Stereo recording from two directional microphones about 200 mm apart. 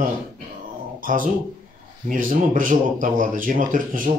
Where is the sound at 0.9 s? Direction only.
45° right (ahead or behind).